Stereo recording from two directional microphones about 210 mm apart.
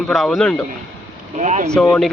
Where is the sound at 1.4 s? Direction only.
35° right (ahead or behind).